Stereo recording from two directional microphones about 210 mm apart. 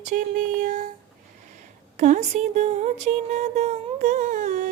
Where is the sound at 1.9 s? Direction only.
35° right (ahead or behind).